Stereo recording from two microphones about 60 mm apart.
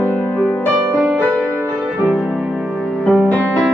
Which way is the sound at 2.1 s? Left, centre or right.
Centre.